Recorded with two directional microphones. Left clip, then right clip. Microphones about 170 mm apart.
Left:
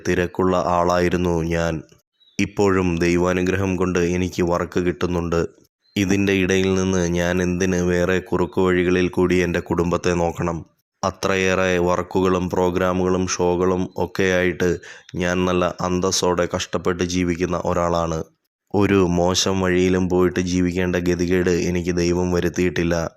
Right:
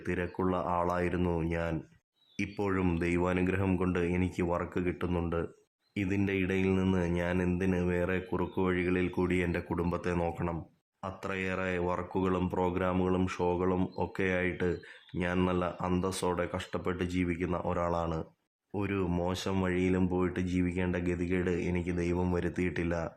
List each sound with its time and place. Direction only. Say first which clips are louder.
0.0 s speech: left 13 dB; 30° left (ahead or behind)
18.7 s speech: left 16 dB; 40° left (ahead or behind)
19.1 s speech: left 14 dB; 30° left (ahead or behind)